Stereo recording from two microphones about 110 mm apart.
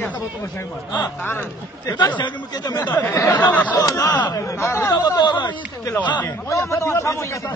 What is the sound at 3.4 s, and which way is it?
Speech, 15° left (ahead or behind).